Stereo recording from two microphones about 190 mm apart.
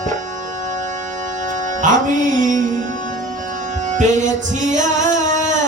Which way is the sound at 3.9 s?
40° right (ahead or behind).